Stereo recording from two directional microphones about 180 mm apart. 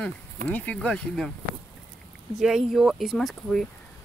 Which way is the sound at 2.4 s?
Centre (ahead or behind).